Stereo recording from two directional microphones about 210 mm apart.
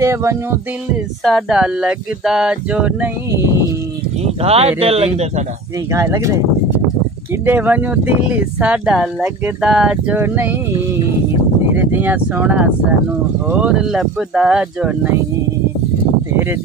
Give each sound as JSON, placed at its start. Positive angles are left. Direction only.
{"t": 0.0, "sound": "speech", "side_deg": -15}
{"t": 1.2, "sound": "a sound", "side_deg": -5}
{"t": 4.4, "sound": "speech", "side_deg": -30}
{"t": 5.9, "sound": "speech", "side_deg": -15}
{"t": 7.4, "sound": "speech", "side_deg": -10}
{"t": 11.7, "sound": "speech", "side_deg": -10}
{"t": 13.6, "sound": "a sound", "side_deg": -5}